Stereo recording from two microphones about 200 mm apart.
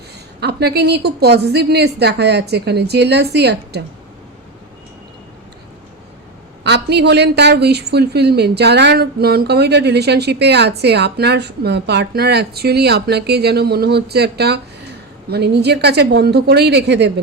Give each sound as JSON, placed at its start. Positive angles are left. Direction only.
{"t": 0.3, "sound": "a woman's voice", "side_deg": -55}
{"t": 6.7, "sound": "a woman's voice", "side_deg": -60}